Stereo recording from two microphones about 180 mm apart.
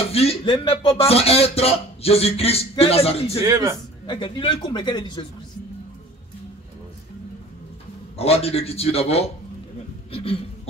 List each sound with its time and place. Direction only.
0.1 s speech: 35° left (ahead or behind)
3.4 s a man's voice: 20° right (ahead or behind)
4.0 s speech: 25° left (ahead or behind)
8.2 s speech: 35° left (ahead or behind)
10.1 s a sound: 35° left (ahead or behind)